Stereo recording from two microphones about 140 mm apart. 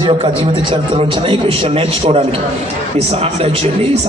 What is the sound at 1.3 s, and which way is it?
Speech, 40° right (ahead or behind).